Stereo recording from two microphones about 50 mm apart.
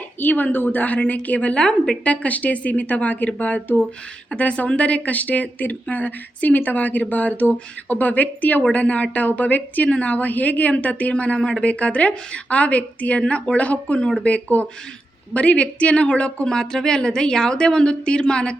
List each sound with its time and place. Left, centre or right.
0.2 s a woman's voice: left
1.6 s a woman's voice: centre
2.0 s a woman's voice: left